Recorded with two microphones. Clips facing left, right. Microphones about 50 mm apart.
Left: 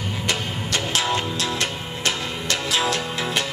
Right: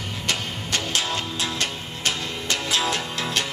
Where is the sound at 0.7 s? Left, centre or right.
Centre.